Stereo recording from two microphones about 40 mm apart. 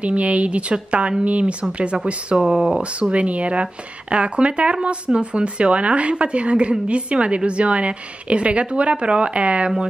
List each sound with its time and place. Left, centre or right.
0.0 s a woman's voice: right
2.3 s speech: centre
2.8 s a woman's voice: right